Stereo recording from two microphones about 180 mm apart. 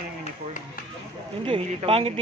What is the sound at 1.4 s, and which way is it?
Speech, 30° right (ahead or behind).